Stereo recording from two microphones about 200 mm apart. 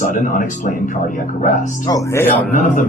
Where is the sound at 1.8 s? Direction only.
15° left (ahead or behind).